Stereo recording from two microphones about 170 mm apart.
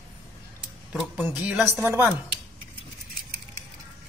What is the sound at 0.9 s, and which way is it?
A woman's voice, 5° right (ahead or behind).